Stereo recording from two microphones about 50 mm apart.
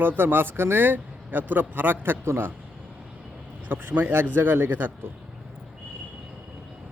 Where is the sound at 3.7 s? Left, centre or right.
Right.